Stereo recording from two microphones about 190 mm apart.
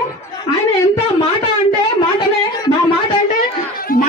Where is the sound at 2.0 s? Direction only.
25° left (ahead or behind).